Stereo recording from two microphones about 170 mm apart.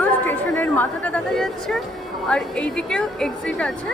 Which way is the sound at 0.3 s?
10° left (ahead or behind).